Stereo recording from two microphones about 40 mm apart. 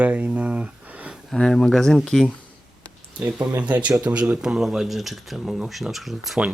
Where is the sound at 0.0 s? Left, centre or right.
Right.